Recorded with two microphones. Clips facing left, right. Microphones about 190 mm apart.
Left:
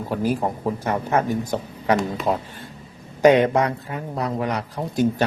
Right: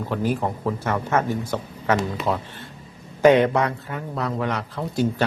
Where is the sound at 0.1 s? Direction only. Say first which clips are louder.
Left 2 dB; 10° left (ahead or behind).